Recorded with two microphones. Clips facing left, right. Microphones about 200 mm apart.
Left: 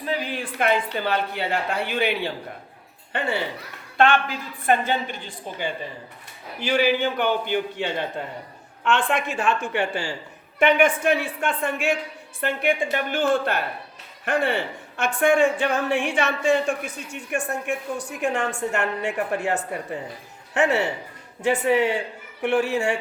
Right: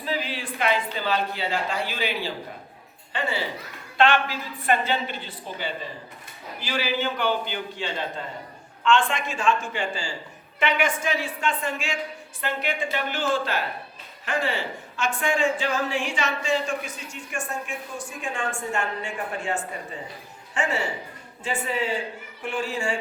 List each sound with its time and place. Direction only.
0.6 s a woman's voice: 55° left (ahead or behind)